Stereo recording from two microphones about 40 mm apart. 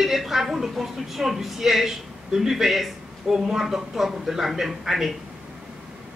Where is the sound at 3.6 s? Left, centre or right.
Centre.